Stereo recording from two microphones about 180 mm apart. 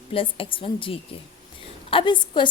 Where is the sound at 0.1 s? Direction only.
30° left (ahead or behind).